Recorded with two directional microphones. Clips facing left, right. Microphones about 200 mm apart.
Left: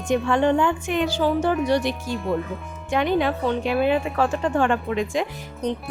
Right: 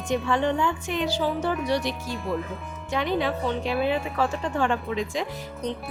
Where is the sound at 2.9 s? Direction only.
55° left (ahead or behind).